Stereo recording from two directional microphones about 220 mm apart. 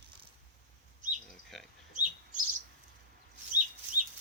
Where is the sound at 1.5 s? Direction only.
Centre (ahead or behind).